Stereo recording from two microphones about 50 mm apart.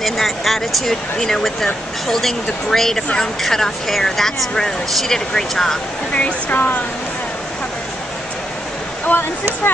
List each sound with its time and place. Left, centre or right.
0.0 s speech: centre
6.5 s speech: left
9.1 s speech: left